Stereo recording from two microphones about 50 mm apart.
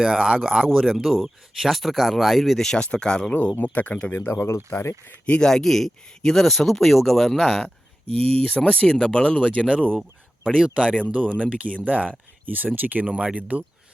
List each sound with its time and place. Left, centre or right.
0.0 s speech: centre
0.7 s speech: centre
2.7 s speech: centre
3.6 s speech: left
4.3 s speech: left
5.2 s speech: left
5.5 s speech: centre
8.4 s speech: left
10.4 s speech: right
11.0 s speech: right
13.1 s speech: right